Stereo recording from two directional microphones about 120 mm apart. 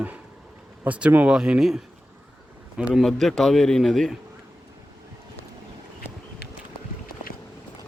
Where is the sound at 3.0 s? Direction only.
5° left (ahead or behind).